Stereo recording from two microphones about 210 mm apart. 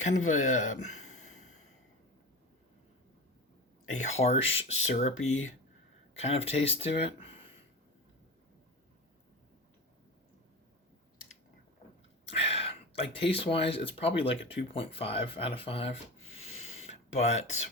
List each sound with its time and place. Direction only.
0.0 s speech: 35° left (ahead or behind)
3.9 s speech: 30° left (ahead or behind)
5.2 s speech: 70° left (ahead or behind)
6.1 s speech: 30° left (ahead or behind)
12.3 s speech: 30° left (ahead or behind)
16.8 s a sound: 30° left (ahead or behind)